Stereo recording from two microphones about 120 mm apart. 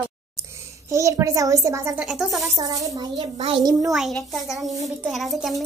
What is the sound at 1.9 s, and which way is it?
Speech, 10° right (ahead or behind).